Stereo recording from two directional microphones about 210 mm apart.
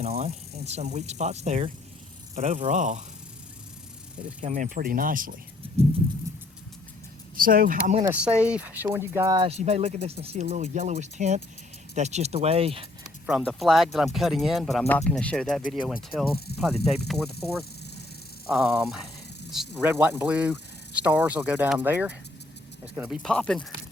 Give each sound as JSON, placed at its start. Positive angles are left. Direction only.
{"t": 0.0, "sound": "speech", "side_deg": -30}
{"t": 4.4, "sound": "speech", "side_deg": -35}
{"t": 7.3, "sound": "speech", "side_deg": -40}
{"t": 8.1, "sound": "speech", "side_deg": -5}
{"t": 9.5, "sound": "speech", "side_deg": -30}
{"t": 13.2, "sound": "speech", "side_deg": 0}
{"t": 16.5, "sound": "speech", "side_deg": 50}
{"t": 16.8, "sound": "speech", "side_deg": 0}